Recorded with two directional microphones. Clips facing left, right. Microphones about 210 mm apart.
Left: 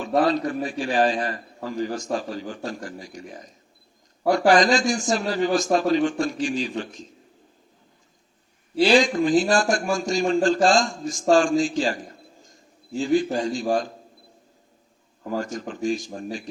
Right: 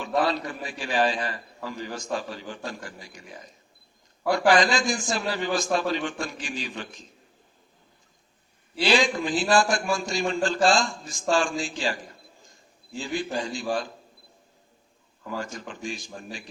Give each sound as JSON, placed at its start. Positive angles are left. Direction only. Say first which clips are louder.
{"t": 0.0, "sound": "a man's voice", "louder": "left 5 dB", "side_deg": 40}
{"t": 8.7, "sound": "a man's voice", "louder": "left 5 dB", "side_deg": 45}
{"t": 15.2, "sound": "a man's voice", "louder": "left 6 dB", "side_deg": 40}